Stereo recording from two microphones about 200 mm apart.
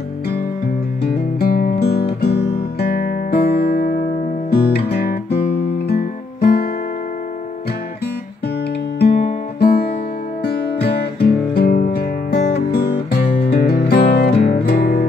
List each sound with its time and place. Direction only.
1.0 s music: 50° left (ahead or behind)
2.2 s guitar: 55° left (ahead or behind)
5.9 s music: 50° left (ahead or behind)
9.0 s music: 50° left (ahead or behind)